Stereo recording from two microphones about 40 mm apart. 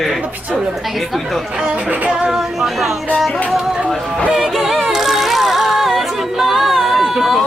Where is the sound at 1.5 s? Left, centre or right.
Right.